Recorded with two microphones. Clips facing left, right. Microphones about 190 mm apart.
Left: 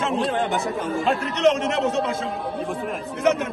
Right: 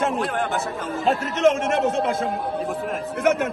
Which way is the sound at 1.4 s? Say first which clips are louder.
Right 1 dB; 50° right (ahead or behind).